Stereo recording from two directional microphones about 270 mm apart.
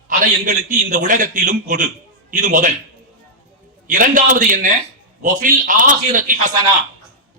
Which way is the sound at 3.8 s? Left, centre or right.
Right.